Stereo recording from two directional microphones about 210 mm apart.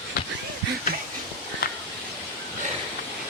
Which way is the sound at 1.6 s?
45° left (ahead or behind).